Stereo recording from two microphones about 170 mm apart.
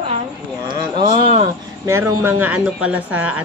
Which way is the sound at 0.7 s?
25° right (ahead or behind).